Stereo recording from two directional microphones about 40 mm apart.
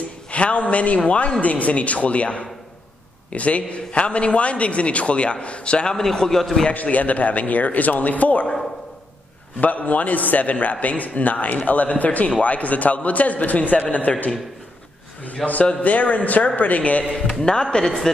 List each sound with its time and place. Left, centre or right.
0.3 s a man's voice: left
5.9 s speech: centre
6.7 s a man's voice: left
9.6 s a man's voice: left
14.1 s a man's voice: left
15.4 s a man's voice: centre
15.8 s a man's voice: left
17.3 s speech: centre